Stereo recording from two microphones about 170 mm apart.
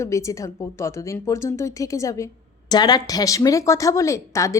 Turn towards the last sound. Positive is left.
turn(degrees=20)  # may be behind; listen again after turning